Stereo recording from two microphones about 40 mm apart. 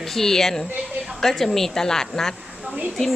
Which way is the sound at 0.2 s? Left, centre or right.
Centre.